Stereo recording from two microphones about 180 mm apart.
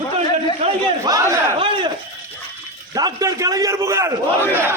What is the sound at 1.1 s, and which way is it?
Battle cry, 20° right (ahead or behind).